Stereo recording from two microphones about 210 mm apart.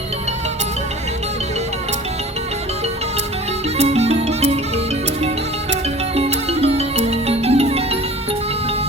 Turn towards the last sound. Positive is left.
turn(degrees=-30)  # may be behind; listen again after turning